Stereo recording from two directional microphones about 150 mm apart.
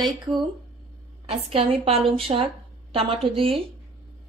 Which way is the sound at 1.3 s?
40° right (ahead or behind).